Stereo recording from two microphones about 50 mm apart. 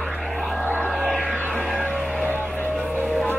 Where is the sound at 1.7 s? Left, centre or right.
Right.